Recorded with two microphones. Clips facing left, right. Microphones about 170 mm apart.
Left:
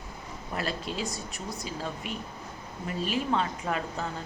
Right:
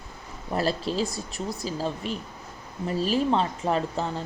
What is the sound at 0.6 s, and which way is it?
Speech, 35° right (ahead or behind).